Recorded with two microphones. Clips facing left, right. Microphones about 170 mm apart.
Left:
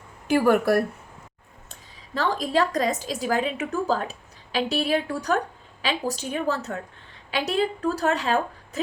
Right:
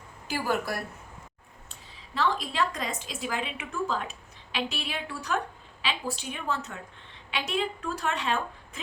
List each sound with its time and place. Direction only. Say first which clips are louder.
0.3 s a woman's voice: left 10 dB; 55° left (ahead or behind)
2.1 s a woman's voice: left 5 dB; 40° left (ahead or behind)